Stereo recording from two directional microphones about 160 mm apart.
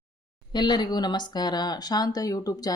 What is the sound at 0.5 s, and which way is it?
Speech, 25° left (ahead or behind).